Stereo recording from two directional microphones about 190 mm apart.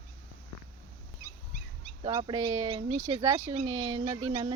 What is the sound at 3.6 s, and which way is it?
Speech, 20° right (ahead or behind).